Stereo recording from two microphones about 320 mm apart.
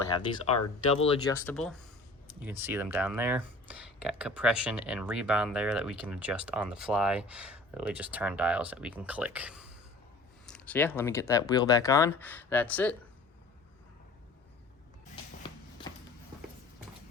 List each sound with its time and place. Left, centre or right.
0.1 s speech: centre